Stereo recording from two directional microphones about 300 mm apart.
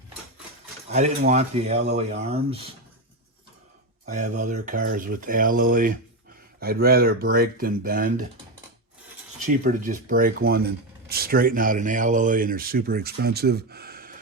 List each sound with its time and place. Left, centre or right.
0.9 s speech: right
4.1 s speech: right
9.5 s speech: right